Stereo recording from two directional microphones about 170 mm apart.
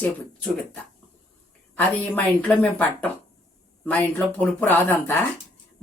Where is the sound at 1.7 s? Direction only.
10° left (ahead or behind).